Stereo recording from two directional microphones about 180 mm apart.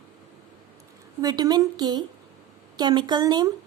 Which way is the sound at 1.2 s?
20° right (ahead or behind).